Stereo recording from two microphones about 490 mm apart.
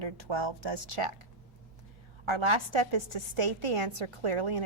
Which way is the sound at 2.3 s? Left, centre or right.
Right.